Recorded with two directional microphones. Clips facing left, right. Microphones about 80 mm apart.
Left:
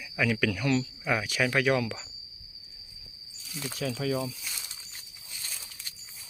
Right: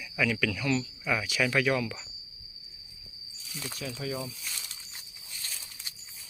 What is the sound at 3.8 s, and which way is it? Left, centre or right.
Speech, left.